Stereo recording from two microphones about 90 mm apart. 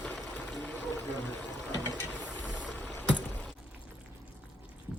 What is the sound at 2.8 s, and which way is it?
Rowboat, 15° left (ahead or behind).